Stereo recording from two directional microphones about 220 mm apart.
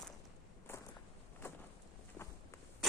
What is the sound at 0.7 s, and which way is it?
Walk, 10° left (ahead or behind).